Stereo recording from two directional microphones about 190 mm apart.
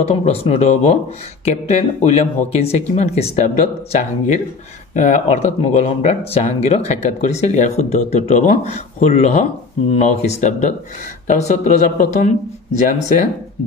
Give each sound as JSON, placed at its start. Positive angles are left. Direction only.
{"t": 0.0, "sound": "speech", "side_deg": 35}